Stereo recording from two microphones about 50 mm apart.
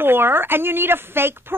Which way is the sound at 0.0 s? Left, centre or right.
Right.